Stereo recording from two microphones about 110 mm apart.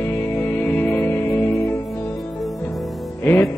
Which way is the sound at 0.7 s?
15° left (ahead or behind).